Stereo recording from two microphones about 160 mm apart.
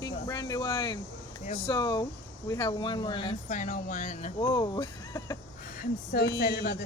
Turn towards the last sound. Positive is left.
turn(degrees=90)